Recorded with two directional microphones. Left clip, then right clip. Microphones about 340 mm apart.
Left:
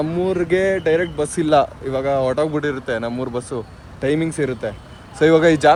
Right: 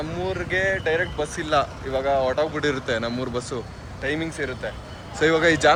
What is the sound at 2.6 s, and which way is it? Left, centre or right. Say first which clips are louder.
Speech: left 2 dB; centre.